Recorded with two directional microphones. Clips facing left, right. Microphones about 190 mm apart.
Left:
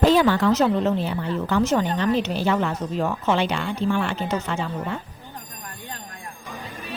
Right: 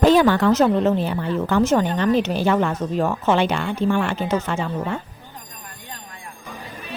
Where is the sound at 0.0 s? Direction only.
55° right (ahead or behind).